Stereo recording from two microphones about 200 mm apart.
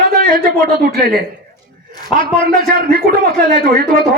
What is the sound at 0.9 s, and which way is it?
Speech, 50° right (ahead or behind).